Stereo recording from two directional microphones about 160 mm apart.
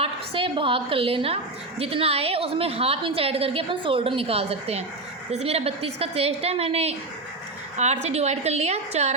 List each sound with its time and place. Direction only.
0.0 s a woman's voice: 35° right (ahead or behind)
8.0 s a woman's voice: 45° right (ahead or behind)